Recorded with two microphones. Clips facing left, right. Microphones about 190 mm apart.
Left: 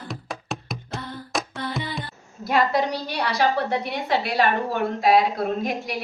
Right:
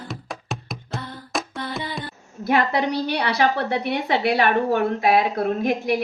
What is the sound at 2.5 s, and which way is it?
A woman's voice, 65° right (ahead or behind).